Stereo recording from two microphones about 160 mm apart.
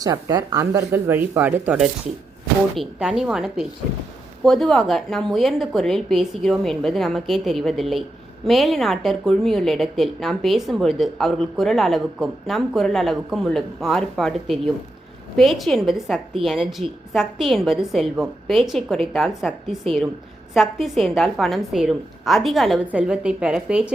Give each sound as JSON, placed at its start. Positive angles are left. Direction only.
{"t": 0.0, "sound": "a woman's voice", "side_deg": -25}